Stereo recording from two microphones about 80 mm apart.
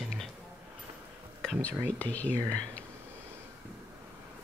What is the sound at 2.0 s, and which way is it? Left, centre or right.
Speech, centre.